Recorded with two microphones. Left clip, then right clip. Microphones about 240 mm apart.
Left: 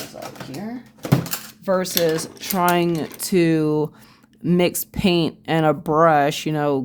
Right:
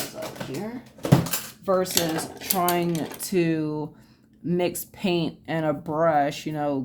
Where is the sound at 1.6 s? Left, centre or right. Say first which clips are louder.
Left 4 dB; left.